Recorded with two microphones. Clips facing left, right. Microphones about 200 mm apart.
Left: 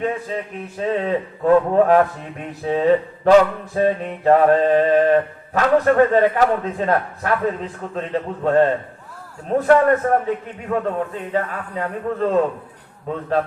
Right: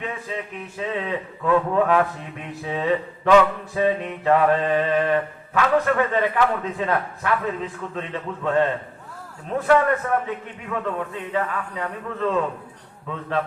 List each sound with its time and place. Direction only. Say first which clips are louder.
0.0 s mantra: left 6 dB; 40° left (ahead or behind)